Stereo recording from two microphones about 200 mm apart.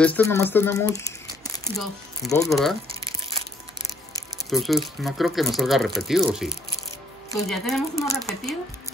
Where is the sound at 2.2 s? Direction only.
Centre (ahead or behind).